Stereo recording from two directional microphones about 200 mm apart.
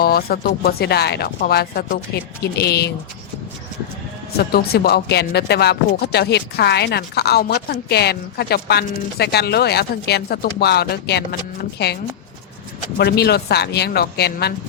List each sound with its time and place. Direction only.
0.0 s speech: 50° left (ahead or behind)
4.4 s speech: 50° left (ahead or behind)
13.0 s speech: 55° left (ahead or behind)